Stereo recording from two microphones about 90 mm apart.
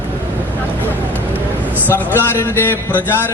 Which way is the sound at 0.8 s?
20° left (ahead or behind).